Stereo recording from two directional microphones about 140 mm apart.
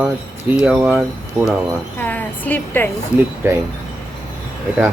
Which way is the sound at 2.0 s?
10° left (ahead or behind).